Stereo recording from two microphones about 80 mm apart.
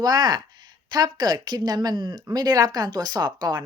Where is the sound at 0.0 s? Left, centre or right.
Right.